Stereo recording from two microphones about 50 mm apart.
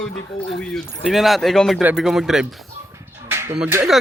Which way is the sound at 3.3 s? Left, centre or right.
Right.